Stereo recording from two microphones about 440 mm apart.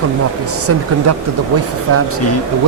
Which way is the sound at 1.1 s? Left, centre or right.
Right.